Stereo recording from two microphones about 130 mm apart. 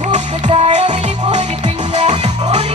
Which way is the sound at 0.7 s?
65° right (ahead or behind).